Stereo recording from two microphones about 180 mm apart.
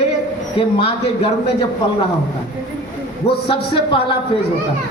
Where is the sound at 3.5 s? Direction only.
30° left (ahead or behind).